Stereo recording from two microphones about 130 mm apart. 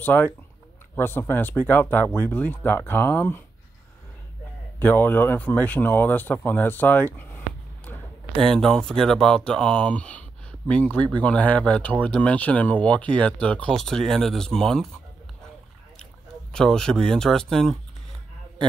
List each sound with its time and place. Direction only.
0.0 s speech: 15° left (ahead or behind)
4.7 s speech: 15° left (ahead or behind)
16.5 s speech: 5° left (ahead or behind)